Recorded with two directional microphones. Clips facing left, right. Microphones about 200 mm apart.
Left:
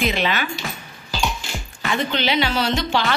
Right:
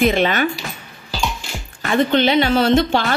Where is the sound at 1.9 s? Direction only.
50° right (ahead or behind).